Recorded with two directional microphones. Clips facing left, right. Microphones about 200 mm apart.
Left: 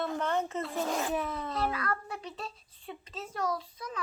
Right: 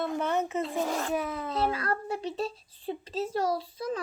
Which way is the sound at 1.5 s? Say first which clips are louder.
Right 4 dB; 30° right (ahead or behind).